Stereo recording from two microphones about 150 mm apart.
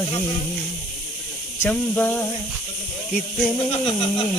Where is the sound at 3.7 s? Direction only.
35° left (ahead or behind).